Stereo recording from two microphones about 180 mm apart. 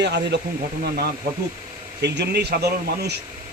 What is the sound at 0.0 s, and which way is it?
Speech, 70° right (ahead or behind).